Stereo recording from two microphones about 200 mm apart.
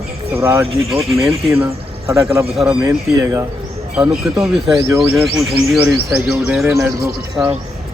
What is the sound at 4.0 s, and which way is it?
Speech, 5° right (ahead or behind).